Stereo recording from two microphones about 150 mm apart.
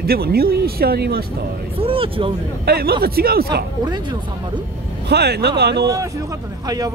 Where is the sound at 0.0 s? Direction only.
90° right.